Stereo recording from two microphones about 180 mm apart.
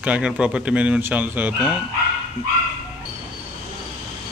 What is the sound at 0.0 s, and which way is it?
Speech, 5° right (ahead or behind).